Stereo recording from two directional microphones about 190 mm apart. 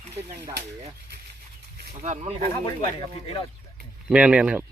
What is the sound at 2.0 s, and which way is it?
Speech, 35° right (ahead or behind).